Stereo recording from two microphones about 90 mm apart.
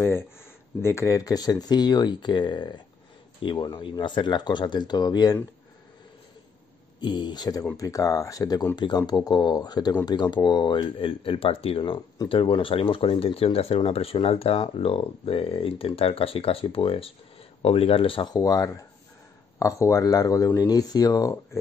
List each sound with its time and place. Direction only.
0.8 s speech: 30° left (ahead or behind)
7.0 s speech: 55° left (ahead or behind)
7.7 s speech: 40° left (ahead or behind); by 18.2 s 85° left
18.2 s speech: 45° left (ahead or behind)